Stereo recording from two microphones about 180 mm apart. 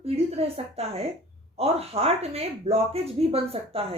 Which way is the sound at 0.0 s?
35° right (ahead or behind).